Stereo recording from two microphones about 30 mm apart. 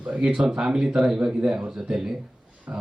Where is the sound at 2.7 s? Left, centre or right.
Right.